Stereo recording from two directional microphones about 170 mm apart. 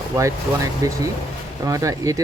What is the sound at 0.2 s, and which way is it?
Speech, 20° right (ahead or behind).